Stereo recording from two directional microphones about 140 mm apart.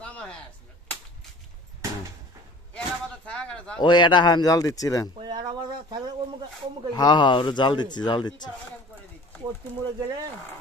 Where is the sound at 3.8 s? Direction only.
35° left (ahead or behind).